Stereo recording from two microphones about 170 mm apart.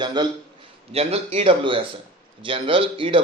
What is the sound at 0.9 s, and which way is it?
Speech, 35° right (ahead or behind).